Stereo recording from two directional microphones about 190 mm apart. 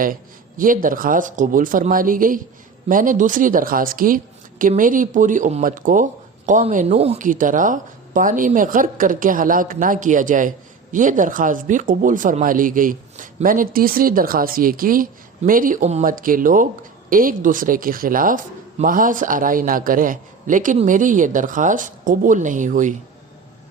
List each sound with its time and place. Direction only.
0.0 s a woman's voice: 45° right (ahead or behind)